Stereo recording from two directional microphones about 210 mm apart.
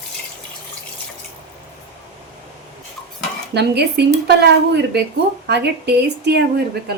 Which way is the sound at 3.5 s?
50° right (ahead or behind).